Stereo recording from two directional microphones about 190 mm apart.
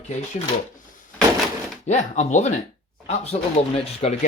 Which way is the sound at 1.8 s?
40° left (ahead or behind).